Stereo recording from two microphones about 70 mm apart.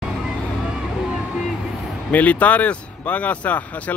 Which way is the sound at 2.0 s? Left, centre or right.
Left.